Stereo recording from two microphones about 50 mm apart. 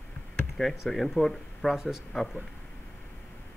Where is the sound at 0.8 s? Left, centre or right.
Centre.